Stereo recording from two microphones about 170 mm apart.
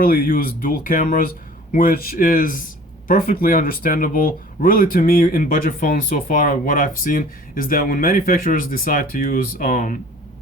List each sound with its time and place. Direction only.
0.0 s speech: 55° left (ahead or behind)